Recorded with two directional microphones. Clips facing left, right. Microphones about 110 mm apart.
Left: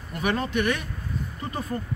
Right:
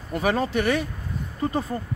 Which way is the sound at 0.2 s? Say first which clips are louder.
Right 2 dB; 35° right (ahead or behind).